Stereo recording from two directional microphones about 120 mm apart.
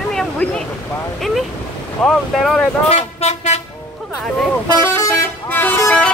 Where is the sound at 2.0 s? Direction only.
5° left (ahead or behind).